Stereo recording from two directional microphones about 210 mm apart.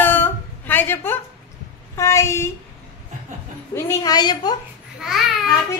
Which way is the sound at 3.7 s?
20° left (ahead or behind).